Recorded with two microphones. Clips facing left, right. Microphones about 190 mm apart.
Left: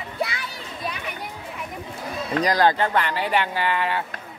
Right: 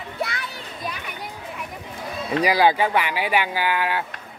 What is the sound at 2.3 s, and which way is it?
Speech, 10° right (ahead or behind).